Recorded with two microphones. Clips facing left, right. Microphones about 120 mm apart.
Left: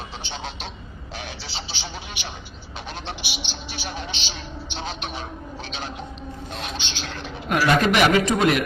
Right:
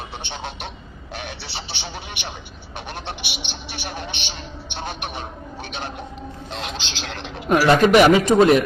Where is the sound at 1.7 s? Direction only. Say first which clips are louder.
Right 2 dB; 60° right (ahead or behind).